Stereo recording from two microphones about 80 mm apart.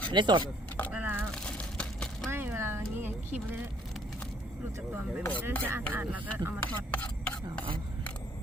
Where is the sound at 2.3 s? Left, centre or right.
Right.